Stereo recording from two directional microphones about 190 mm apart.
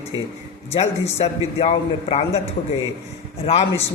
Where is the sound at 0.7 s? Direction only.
35° left (ahead or behind).